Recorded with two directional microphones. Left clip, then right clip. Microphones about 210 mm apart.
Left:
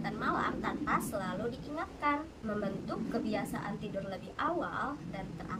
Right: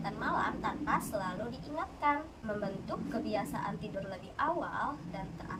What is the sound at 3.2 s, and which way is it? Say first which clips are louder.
Speech: right 1 dB; 10° left (ahead or behind).